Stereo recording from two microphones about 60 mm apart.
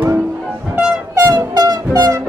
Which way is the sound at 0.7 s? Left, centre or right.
Centre.